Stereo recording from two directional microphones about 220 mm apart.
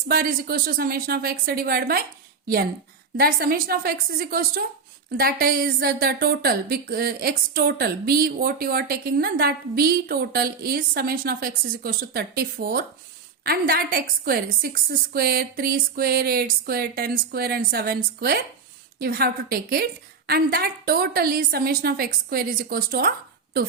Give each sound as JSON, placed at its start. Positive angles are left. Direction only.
{"t": 0.1, "sound": "a woman's voice", "side_deg": -40}
{"t": 3.2, "sound": "a woman's voice", "side_deg": -45}